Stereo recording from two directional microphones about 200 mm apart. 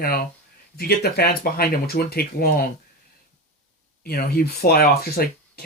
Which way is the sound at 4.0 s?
50° left (ahead or behind).